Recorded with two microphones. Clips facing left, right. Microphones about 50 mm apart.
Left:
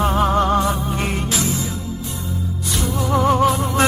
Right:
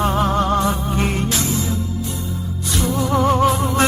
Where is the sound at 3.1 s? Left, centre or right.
Centre.